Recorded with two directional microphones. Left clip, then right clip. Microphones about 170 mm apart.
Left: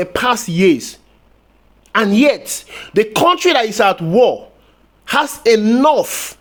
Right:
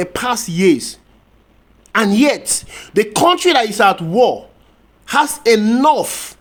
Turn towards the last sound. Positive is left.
turn(degrees=30)  # may be behind; listen again after turning